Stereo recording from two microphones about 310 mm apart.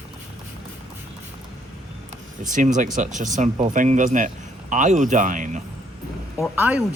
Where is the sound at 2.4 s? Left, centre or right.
Right.